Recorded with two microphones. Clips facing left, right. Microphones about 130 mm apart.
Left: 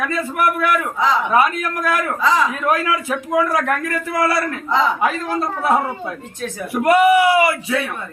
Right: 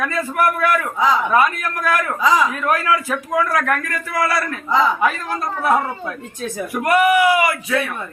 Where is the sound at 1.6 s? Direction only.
20° left (ahead or behind).